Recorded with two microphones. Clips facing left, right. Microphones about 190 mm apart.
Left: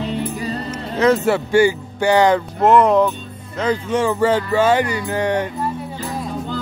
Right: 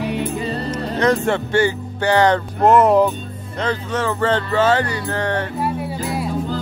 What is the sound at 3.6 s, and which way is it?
Speech, 10° left (ahead or behind).